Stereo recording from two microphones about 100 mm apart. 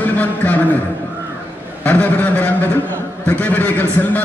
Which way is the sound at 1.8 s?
15° left (ahead or behind).